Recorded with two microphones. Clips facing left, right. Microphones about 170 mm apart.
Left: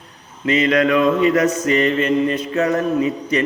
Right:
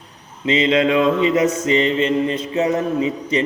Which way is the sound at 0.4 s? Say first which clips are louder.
Even; 25° right (ahead or behind).